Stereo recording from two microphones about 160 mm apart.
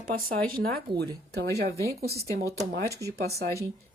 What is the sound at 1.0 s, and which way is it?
Speech, 90° right.